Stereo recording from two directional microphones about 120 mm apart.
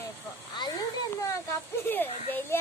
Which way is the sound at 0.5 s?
35° left (ahead or behind).